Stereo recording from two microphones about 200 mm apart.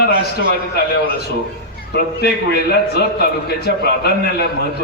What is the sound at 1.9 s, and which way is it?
A man's voice, 50° left (ahead or behind).